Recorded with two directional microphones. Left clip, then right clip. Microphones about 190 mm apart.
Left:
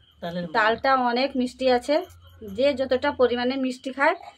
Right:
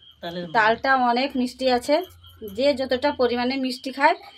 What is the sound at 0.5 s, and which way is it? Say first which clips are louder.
Speech: right 2 dB; 20° right (ahead or behind).